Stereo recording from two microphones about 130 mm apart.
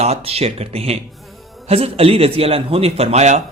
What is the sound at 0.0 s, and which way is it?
A man's voice, 50° right (ahead or behind).